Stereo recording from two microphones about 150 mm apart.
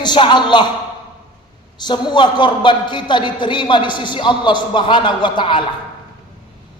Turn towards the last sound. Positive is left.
turn(degrees=30)  # may be behind; listen again after turning